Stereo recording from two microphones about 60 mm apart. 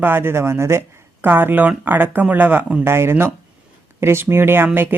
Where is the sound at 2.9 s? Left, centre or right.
Right.